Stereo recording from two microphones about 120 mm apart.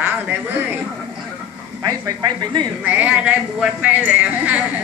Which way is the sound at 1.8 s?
35° right (ahead or behind).